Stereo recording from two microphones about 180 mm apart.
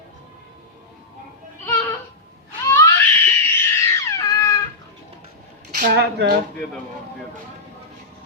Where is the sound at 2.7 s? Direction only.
15° left (ahead or behind).